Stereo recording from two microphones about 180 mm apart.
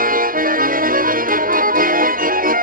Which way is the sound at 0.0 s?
50° right (ahead or behind).